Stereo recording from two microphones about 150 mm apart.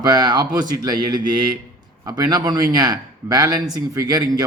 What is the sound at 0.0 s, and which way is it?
A man's voice, 30° right (ahead or behind).